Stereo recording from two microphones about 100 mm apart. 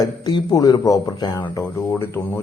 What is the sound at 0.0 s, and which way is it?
A man's voice, 40° left (ahead or behind).